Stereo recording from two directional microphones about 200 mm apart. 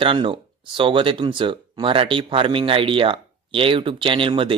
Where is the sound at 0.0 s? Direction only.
25° right (ahead or behind).